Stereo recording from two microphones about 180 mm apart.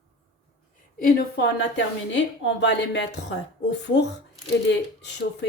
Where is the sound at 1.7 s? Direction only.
80° left.